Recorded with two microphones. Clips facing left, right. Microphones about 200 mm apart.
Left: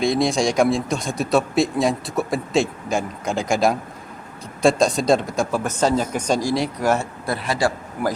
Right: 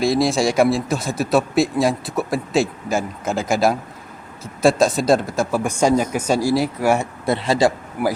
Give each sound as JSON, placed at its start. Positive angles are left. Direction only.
{"t": 0.0, "sound": "a man's voice", "side_deg": -5}
{"t": 7.3, "sound": "speech", "side_deg": -25}
{"t": 8.0, "sound": "a man's voice", "side_deg": -10}